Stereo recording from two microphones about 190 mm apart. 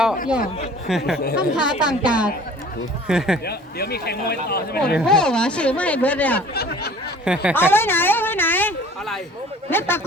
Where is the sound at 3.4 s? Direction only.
55° left (ahead or behind).